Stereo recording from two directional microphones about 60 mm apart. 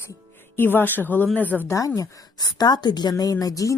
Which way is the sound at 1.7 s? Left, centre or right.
Left.